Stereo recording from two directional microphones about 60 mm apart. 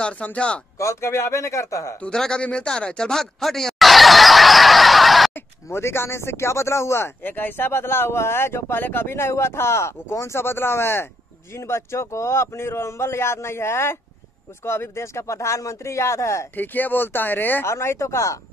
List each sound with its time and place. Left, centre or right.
0.0 s speech: left
0.7 s speech: left
2.0 s speech: centre
2.4 s a sound: centre
5.3 s speech: left
7.2 s speech: left
16.5 s speech: left
17.6 s speech: left